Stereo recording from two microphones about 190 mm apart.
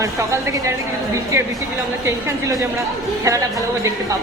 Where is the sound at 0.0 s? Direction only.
15° right (ahead or behind).